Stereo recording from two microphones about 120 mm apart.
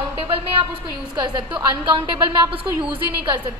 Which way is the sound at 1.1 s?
40° right (ahead or behind).